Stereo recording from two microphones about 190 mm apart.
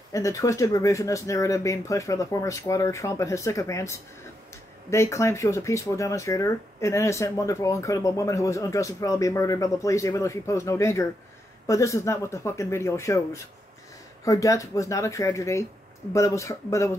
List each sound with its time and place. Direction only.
0.1 s speech: 15° left (ahead or behind)